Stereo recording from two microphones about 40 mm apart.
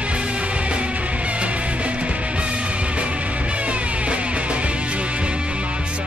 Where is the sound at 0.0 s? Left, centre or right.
Right.